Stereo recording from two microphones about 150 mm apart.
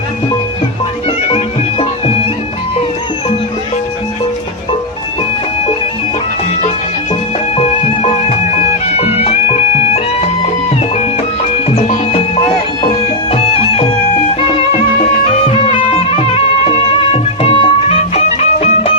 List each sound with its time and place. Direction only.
7.5 s music: 40° left (ahead or behind)
11.7 s music: 45° left (ahead or behind)